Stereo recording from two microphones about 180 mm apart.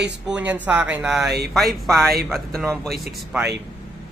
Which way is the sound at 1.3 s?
60° right (ahead or behind).